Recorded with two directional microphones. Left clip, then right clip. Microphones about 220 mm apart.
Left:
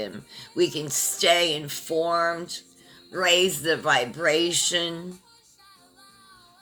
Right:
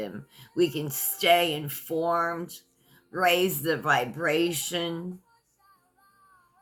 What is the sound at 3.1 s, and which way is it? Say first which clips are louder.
Speech: left 3 dB; 15° right (ahead or behind).